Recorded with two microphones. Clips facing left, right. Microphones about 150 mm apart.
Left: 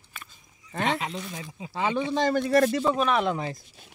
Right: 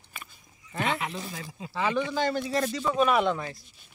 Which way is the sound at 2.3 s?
60° left (ahead or behind).